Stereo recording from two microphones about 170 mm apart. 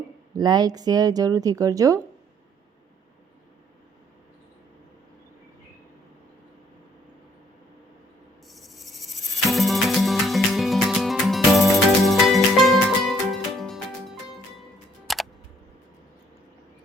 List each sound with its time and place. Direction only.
0.3 s a woman's voice: 25° right (ahead or behind)
8.4 s a sound: centre (ahead or behind)
9.5 s music: centre (ahead or behind)